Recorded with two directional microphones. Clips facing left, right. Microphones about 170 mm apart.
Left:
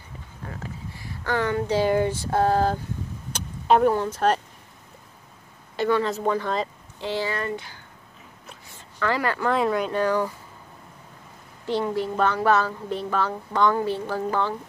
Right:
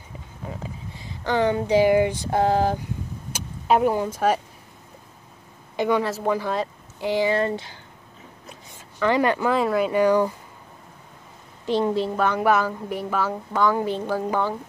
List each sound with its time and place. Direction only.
0.4 s speech: 15° right (ahead or behind)
5.8 s a woman's voice: 15° right (ahead or behind)
6.0 s speech: 5° right (ahead or behind)
7.3 s a woman's voice: 30° right (ahead or behind)
8.7 s a sound: 20° right (ahead or behind)
9.5 s speech: centre (ahead or behind)
11.6 s a woman's voice: 20° right (ahead or behind)